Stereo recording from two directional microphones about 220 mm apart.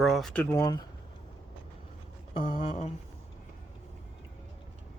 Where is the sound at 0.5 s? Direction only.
15° left (ahead or behind).